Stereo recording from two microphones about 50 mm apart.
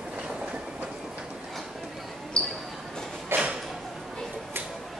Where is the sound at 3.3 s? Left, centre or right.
Right.